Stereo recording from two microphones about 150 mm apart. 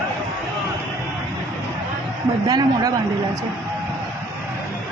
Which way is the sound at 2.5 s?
25° right (ahead or behind).